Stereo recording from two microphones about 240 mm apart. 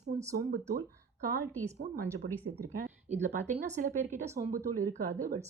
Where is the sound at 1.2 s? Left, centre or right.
Right.